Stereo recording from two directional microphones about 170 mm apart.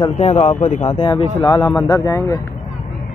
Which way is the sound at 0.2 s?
40° left (ahead or behind).